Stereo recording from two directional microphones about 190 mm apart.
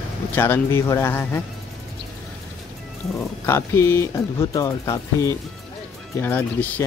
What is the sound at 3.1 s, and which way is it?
Speech, 15° left (ahead or behind).